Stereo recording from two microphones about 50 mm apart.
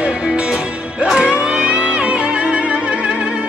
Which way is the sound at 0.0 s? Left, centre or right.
Right.